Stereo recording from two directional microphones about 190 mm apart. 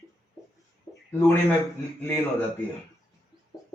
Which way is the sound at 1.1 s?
10° left (ahead or behind).